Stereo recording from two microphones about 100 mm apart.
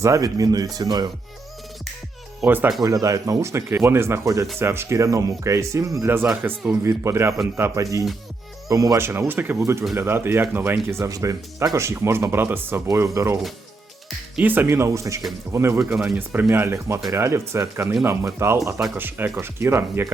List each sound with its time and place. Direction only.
0.0 s speech: 35° right (ahead or behind)
2.8 s speech: 35° right (ahead or behind); by 6.5 s 15° right (ahead or behind)
6.8 s speech: 30° right (ahead or behind)
9.6 s speech: 30° right (ahead or behind)
14.3 s speech: 20° right (ahead or behind)
18.9 s speech: 20° right (ahead or behind)